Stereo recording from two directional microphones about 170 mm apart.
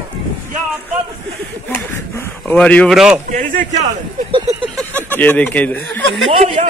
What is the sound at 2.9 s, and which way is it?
Speech, 5° right (ahead or behind).